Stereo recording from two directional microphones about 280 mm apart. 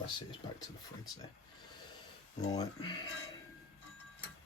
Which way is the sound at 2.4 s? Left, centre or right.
Centre.